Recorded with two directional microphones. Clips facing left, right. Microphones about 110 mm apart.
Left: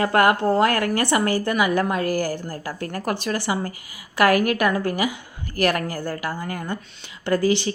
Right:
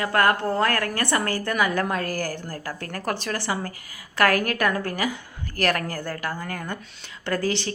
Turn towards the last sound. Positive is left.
turn(degrees=5)  # may be behind; listen again after turning